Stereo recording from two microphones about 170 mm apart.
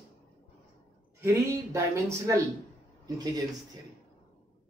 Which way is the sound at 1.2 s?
15° right (ahead or behind).